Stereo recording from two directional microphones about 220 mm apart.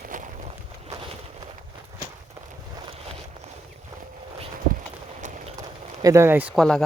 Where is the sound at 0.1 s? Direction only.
35° right (ahead or behind).